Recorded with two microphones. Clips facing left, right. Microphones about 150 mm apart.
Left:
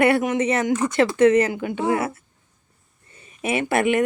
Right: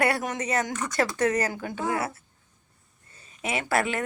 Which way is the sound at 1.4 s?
40° right (ahead or behind).